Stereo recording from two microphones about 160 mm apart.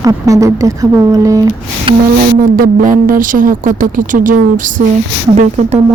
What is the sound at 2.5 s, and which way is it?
A woman's voice, 65° right (ahead or behind).